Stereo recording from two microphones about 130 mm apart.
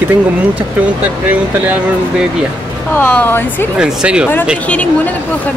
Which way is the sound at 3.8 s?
5° right (ahead or behind).